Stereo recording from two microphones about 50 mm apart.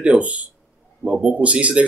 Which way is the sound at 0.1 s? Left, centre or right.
Right.